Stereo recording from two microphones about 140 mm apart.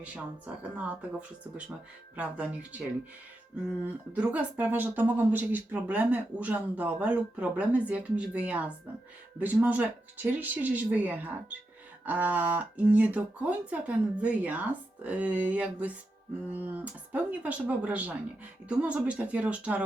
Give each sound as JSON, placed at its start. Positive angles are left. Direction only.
{"t": 0.0, "sound": "speech", "side_deg": -10}
{"t": 2.1, "sound": "speech", "side_deg": -10}
{"t": 3.8, "sound": "speech", "side_deg": -10}